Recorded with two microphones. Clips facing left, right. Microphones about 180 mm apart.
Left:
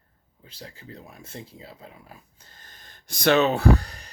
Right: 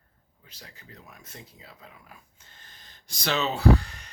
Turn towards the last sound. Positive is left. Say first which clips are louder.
# left 1 dB
turn(degrees=35)  # may be behind; listen again after turning